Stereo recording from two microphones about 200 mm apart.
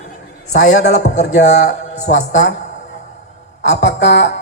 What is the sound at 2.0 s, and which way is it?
Speech, 40° left (ahead or behind).